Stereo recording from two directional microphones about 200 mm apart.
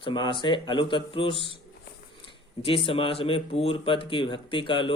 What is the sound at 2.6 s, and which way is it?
Speech, 25° left (ahead or behind).